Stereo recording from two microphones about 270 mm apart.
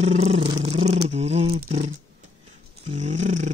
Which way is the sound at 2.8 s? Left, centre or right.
Right.